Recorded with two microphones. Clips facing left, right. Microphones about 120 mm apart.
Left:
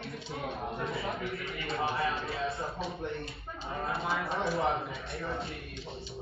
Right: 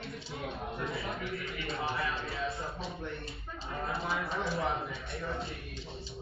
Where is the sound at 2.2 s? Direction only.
25° left (ahead or behind).